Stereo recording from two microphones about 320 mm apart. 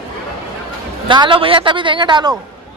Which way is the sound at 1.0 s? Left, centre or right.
Centre.